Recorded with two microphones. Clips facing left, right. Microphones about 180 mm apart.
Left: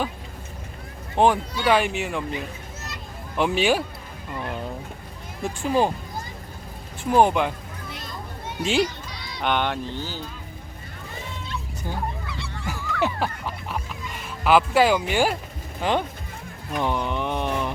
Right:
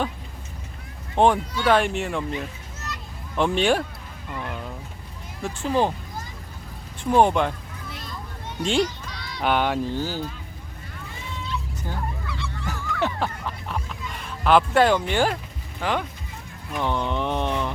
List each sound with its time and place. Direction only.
1.1 s speech: 5° left (ahead or behind)
5.4 s speech: 10° left (ahead or behind)
7.0 s speech: 5° left (ahead or behind)
8.6 s speech: 5° left (ahead or behind)
10.0 s speech: 45° right (ahead or behind)
11.8 s goose: 15° left (ahead or behind)
15.8 s speech: 25° left (ahead or behind)
16.7 s a sound: 10° left (ahead or behind)